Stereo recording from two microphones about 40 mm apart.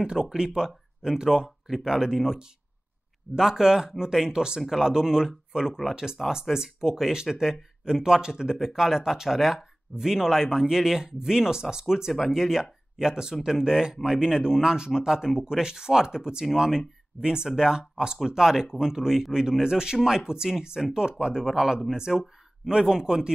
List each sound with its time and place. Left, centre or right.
0.0 s speech: centre
4.6 s speech: centre
6.2 s speech: centre
6.5 s speech: centre